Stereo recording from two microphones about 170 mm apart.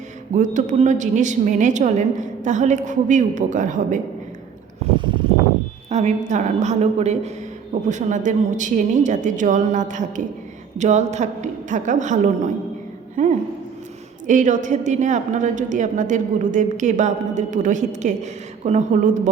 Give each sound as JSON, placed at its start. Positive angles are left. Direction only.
{"t": 0.3, "sound": "a woman's voice", "side_deg": -45}
{"t": 5.9, "sound": "a woman's voice", "side_deg": -45}